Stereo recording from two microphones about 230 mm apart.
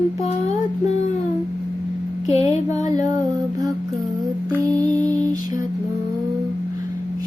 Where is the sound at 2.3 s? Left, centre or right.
Centre.